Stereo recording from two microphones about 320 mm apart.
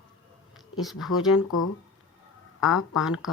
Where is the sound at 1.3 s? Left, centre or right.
Left.